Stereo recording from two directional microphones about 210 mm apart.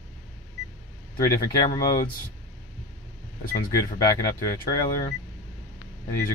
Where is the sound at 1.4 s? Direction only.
15° left (ahead or behind).